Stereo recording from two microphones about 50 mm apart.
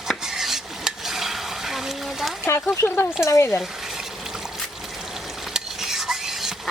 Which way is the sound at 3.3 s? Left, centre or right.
Left.